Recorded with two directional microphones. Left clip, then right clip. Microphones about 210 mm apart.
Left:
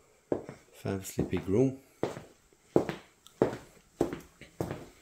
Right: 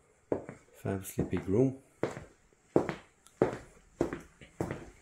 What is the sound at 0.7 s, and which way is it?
Speech, centre (ahead or behind).